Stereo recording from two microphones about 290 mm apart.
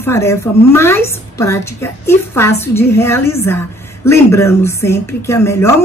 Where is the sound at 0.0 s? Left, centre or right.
Centre.